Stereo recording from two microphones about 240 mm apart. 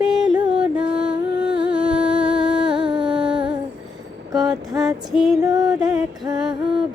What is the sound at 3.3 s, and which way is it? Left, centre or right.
Humming, right.